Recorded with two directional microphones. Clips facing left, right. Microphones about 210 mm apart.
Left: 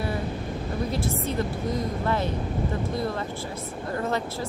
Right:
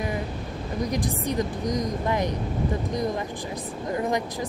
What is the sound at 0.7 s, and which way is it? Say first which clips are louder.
Speech: right 2 dB; 15° right (ahead or behind).